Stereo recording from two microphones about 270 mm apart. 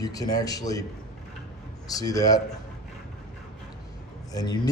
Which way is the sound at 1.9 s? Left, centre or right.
Centre.